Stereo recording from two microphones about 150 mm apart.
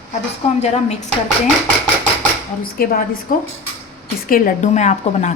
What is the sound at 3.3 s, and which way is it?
A woman's voice, 60° left (ahead or behind).